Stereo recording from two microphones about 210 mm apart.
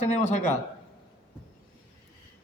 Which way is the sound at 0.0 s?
35° left (ahead or behind).